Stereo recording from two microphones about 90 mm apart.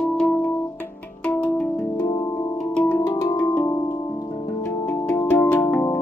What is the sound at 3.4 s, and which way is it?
Music, 15° left (ahead or behind).